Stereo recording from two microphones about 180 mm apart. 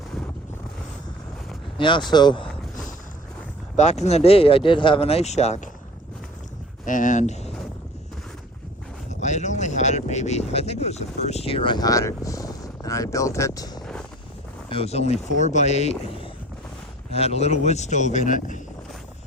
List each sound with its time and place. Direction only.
1.8 s speech: 25° left (ahead or behind)
3.8 s speech: 40° left (ahead or behind)
6.8 s speech: 45° left (ahead or behind)
9.0 s a sound: 40° left (ahead or behind); by 13.8 s 20° left (ahead or behind)
14.7 s speech: 35° left (ahead or behind)